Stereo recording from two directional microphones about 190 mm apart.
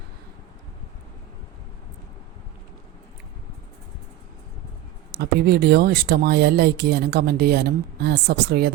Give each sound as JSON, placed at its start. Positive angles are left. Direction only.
{"t": 5.1, "sound": "speech", "side_deg": -60}